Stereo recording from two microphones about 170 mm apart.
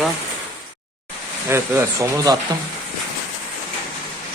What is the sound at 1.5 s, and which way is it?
Speech, 15° right (ahead or behind).